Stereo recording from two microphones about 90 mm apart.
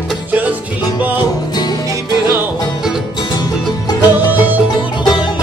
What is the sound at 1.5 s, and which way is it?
Music, 50° left (ahead or behind).